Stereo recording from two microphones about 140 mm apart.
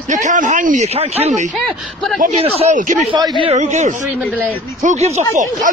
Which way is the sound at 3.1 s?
35° right (ahead or behind).